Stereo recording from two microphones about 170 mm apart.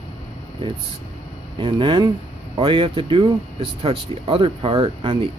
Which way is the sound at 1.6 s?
30° right (ahead or behind).